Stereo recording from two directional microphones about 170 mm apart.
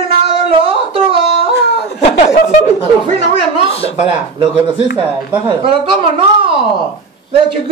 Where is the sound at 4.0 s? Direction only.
30° right (ahead or behind).